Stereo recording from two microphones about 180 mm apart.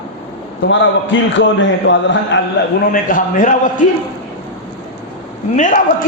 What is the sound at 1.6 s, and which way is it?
Speech, 90° left.